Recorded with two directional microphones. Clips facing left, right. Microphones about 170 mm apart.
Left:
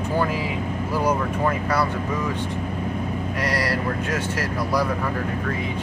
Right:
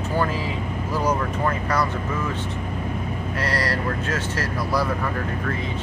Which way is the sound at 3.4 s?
10° left (ahead or behind).